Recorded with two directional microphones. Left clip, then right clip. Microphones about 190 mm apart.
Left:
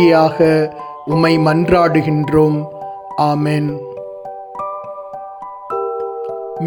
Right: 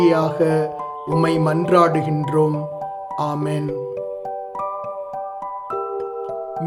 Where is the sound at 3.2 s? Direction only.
25° left (ahead or behind).